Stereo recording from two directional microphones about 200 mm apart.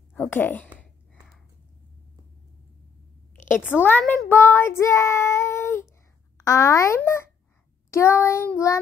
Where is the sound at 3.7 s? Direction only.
10° left (ahead or behind).